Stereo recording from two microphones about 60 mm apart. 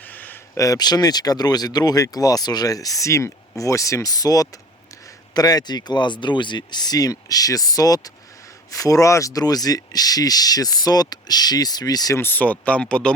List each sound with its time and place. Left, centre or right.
0.0 s a sound: left
0.5 s speech: left
6.9 s speech: left
8.7 s speech: left
12.2 s speech: left; by 13.1 s centre